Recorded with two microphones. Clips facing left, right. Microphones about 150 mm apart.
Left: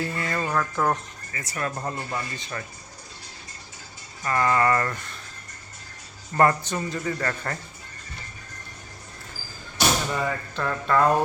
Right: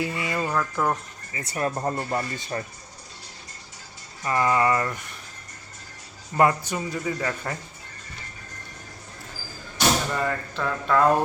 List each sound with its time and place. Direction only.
0.0 s music: 10° right (ahead or behind)
1.3 s speech: 30° right (ahead or behind)
4.2 s speech: 15° right (ahead or behind)
6.3 s speech: 10° right (ahead or behind)
10.1 s speech: centre (ahead or behind)